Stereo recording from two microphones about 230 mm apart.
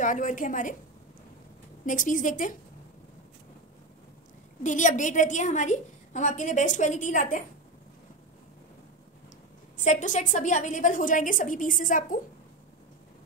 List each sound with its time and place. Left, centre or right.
0.0 s a woman's voice: left
1.9 s a woman's voice: left
4.6 s a woman's voice: left
9.8 s a woman's voice: left